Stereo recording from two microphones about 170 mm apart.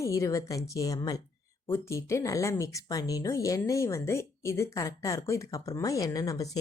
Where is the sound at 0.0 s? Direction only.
20° left (ahead or behind).